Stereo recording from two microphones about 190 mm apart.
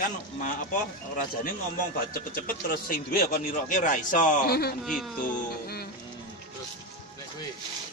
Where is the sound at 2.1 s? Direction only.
50° left (ahead or behind).